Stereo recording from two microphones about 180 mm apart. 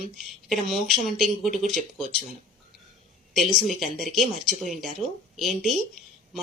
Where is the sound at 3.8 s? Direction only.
Centre (ahead or behind).